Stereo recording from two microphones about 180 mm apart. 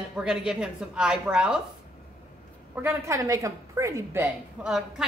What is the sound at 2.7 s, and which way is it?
Speech, 10° right (ahead or behind).